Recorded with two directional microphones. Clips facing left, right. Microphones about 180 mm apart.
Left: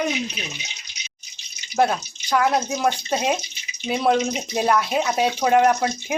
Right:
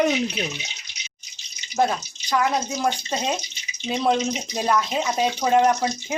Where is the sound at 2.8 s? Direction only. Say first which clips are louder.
Left 2 dB; 10° left (ahead or behind).